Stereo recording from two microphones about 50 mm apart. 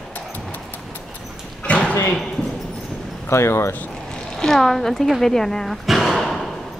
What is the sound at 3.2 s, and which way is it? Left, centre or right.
Speech, left.